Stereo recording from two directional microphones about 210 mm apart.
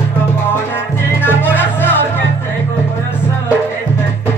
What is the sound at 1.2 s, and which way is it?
Music, 10° left (ahead or behind).